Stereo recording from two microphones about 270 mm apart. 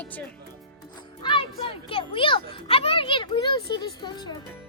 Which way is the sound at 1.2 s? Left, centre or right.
Centre.